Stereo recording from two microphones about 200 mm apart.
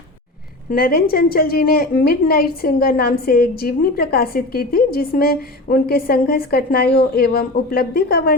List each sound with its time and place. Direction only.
0.7 s a woman's voice: 45° left (ahead or behind)